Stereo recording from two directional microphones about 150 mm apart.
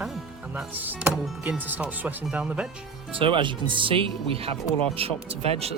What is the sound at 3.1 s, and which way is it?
Speech, 35° right (ahead or behind).